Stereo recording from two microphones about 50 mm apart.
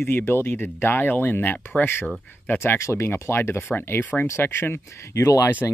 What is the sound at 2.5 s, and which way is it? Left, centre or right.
Speech, left.